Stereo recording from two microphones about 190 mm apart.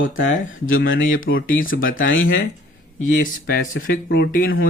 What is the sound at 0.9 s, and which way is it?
Speech, 90° left.